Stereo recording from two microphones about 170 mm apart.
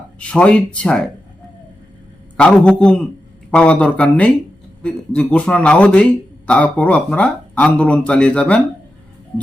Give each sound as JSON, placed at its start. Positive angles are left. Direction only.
{"t": 0.2, "sound": "speech", "side_deg": 5}
{"t": 2.4, "sound": "a man's voice", "side_deg": 5}
{"t": 5.3, "sound": "speech", "side_deg": 5}